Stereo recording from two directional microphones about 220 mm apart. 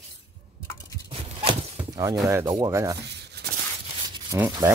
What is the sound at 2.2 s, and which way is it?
Speech, 15° right (ahead or behind).